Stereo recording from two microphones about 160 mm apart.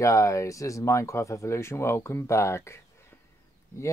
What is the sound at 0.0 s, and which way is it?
Speech, 20° left (ahead or behind).